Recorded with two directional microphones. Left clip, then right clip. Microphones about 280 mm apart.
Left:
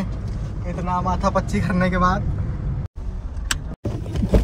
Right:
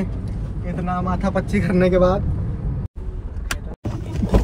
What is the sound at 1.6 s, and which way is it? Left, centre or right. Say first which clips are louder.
Speech: right 4 dB; left.